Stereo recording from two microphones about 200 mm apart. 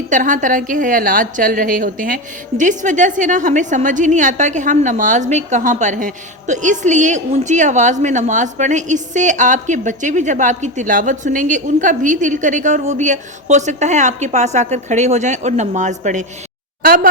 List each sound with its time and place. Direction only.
0.1 s a woman's voice: 40° right (ahead or behind)